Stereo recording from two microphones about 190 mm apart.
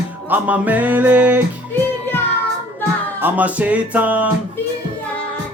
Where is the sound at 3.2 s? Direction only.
10° right (ahead or behind).